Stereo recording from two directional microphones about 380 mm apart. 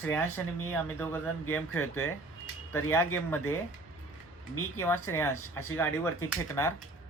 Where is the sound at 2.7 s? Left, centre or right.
Centre.